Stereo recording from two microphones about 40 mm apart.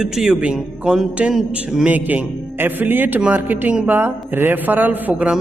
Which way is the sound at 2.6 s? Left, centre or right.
Right.